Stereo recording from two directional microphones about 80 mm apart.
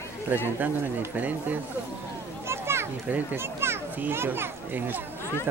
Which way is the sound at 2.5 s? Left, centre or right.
Right.